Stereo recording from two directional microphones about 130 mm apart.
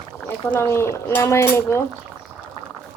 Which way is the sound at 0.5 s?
20° left (ahead or behind).